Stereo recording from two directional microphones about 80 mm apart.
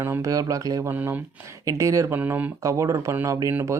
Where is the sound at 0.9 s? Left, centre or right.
Right.